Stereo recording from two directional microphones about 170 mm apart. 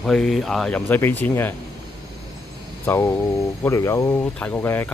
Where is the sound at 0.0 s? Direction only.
5° left (ahead or behind).